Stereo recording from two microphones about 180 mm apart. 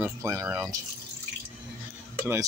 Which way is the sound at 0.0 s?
15° right (ahead or behind).